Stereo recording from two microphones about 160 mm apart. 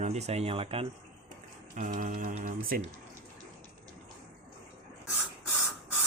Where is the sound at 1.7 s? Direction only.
55° right (ahead or behind).